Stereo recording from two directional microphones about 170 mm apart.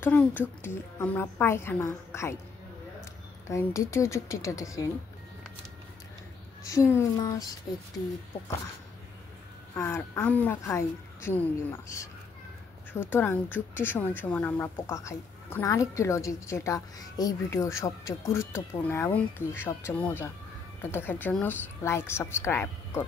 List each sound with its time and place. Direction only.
0.0 s a woman's voice: 10° left (ahead or behind)
3.4 s a woman's voice: 15° left (ahead or behind)
6.6 s speech: 20° left (ahead or behind)
9.8 s a woman's voice: 15° left (ahead or behind)
12.9 s a woman's voice: 10° left (ahead or behind)